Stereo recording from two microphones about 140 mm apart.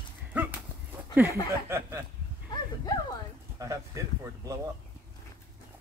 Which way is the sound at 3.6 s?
20° right (ahead or behind).